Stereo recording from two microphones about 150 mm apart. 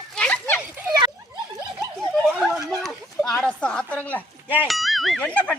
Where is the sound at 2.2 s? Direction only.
Centre (ahead or behind).